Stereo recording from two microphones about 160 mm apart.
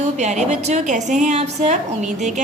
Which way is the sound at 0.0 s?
45° right (ahead or behind).